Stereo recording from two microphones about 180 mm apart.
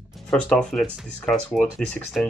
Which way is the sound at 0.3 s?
5° left (ahead or behind).